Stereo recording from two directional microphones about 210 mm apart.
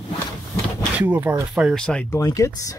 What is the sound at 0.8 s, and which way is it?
Speech, 5° right (ahead or behind).